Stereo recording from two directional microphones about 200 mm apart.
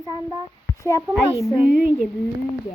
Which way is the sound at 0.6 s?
15° left (ahead or behind).